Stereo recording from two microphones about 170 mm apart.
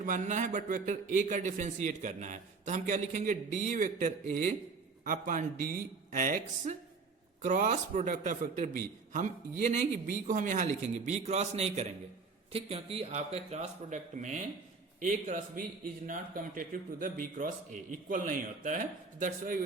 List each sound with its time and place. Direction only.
0.0 s a man's voice: 50° right (ahead or behind)